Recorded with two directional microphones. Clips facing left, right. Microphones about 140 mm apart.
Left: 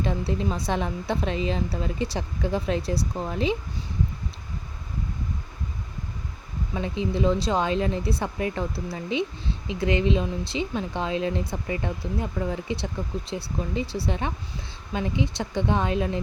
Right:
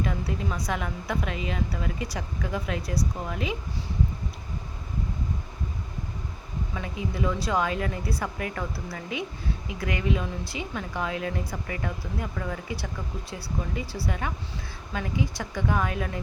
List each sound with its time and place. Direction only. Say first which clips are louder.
0.0 s speech: left 3 dB; 30° left (ahead or behind)
6.7 s speech: left 6 dB; 25° left (ahead or behind)